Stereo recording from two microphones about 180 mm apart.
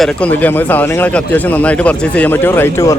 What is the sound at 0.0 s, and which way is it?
Speech, 5° left (ahead or behind).